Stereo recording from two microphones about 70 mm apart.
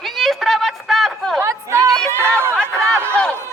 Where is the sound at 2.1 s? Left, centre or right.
Right.